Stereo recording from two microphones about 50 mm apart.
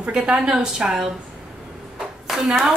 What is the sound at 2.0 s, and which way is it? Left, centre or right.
Clapping, centre.